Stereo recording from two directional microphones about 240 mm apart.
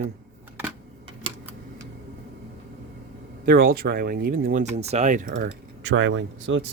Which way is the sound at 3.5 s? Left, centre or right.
Right.